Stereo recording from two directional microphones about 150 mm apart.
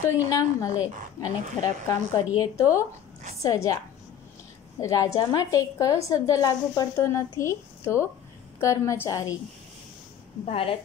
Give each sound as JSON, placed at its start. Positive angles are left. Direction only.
{"t": 0.0, "sound": "a woman's voice", "side_deg": 25}
{"t": 10.4, "sound": "a woman's voice", "side_deg": 40}